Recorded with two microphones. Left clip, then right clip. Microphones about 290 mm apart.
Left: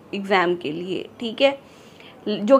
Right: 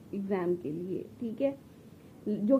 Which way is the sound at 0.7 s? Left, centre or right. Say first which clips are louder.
Left 9 dB; left.